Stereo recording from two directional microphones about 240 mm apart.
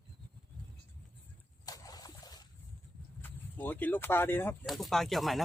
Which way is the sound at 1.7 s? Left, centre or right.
Centre.